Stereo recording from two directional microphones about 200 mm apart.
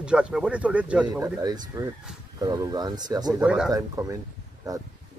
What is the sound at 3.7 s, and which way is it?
Speech, 15° right (ahead or behind).